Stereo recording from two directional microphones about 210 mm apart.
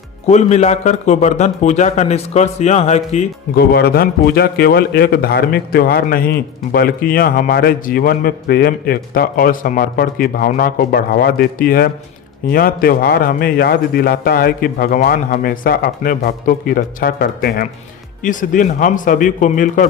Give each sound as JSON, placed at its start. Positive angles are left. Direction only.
{"t": 0.3, "sound": "a man's voice", "side_deg": 35}
{"t": 3.5, "sound": "a man's voice", "side_deg": 50}